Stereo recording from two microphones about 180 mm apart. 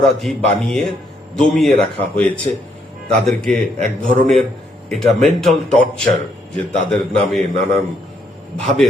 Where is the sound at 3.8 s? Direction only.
50° right (ahead or behind).